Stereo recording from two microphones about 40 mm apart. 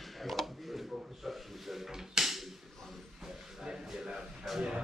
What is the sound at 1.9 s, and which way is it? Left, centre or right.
Drawer open or close, centre.